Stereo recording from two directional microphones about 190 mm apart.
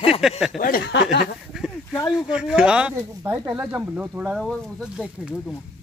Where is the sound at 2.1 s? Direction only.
5° right (ahead or behind).